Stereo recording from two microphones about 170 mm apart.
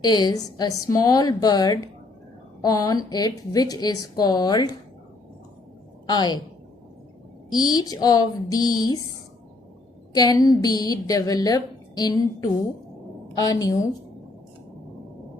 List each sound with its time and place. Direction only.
0.0 s a woman's voice: 25° left (ahead or behind)
6.1 s a woman's voice: 25° left (ahead or behind)
7.5 s a woman's voice: 25° left (ahead or behind)
10.2 s a woman's voice: 20° left (ahead or behind)